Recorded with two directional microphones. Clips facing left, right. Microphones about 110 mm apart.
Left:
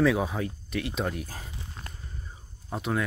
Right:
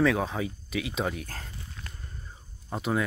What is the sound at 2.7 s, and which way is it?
Speech, centre (ahead or behind).